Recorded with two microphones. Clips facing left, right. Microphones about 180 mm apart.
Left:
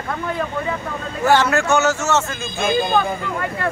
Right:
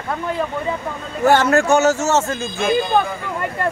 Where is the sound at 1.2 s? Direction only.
50° right (ahead or behind).